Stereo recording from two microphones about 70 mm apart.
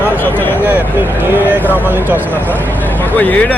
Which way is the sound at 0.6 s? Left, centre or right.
Right.